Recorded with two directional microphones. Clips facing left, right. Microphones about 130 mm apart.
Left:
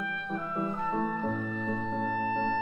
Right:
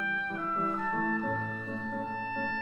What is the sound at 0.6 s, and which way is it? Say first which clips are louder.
Music: left 2 dB; 20° left (ahead or behind).